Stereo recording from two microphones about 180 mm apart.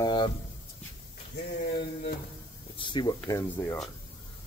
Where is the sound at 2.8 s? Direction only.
25° left (ahead or behind).